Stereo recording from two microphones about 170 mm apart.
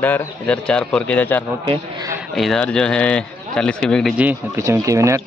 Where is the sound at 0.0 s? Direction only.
10° left (ahead or behind).